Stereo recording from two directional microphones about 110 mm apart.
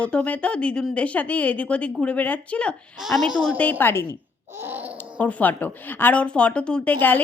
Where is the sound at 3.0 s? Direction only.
Centre (ahead or behind).